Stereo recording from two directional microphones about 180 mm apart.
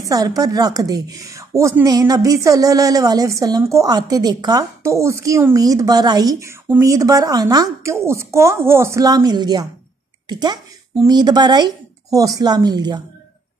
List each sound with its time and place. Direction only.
0.0 s a woman's voice: 20° right (ahead or behind)